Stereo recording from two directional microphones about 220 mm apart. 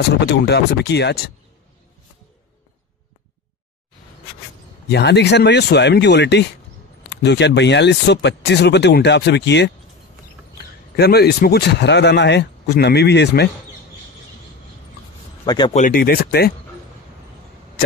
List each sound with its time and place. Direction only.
0.3 s speech: 50° left (ahead or behind)
4.8 s speech: 50° left (ahead or behind)
11.0 s speech: 45° left (ahead or behind)
15.4 s speech: 20° left (ahead or behind)
15.7 s speech: 40° left (ahead or behind)